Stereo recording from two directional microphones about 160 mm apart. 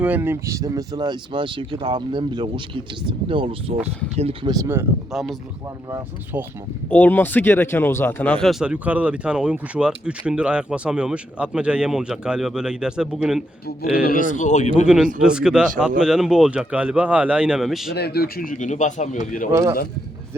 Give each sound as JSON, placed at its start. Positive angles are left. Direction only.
{"t": 0.0, "sound": "speech", "side_deg": -10}
{"t": 4.4, "sound": "speech", "side_deg": -20}
{"t": 5.1, "sound": "speech", "side_deg": 0}
{"t": 6.9, "sound": "speech", "side_deg": 10}
{"t": 13.9, "sound": "speech", "side_deg": 65}
{"t": 14.8, "sound": "speech", "side_deg": -5}
{"t": 17.9, "sound": "speech", "side_deg": 85}
{"t": 18.5, "sound": "speech", "side_deg": 50}
{"t": 19.5, "sound": "speech", "side_deg": -20}